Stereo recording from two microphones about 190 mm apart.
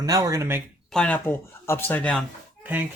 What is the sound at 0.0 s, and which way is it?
Speech, 20° right (ahead or behind).